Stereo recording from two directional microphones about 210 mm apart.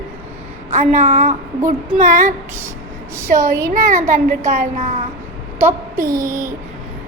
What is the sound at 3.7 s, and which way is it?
A child's voice, 40° right (ahead or behind).